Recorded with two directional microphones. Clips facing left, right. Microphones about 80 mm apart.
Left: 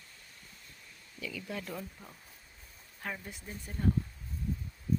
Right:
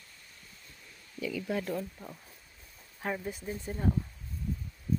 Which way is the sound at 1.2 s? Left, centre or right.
Right.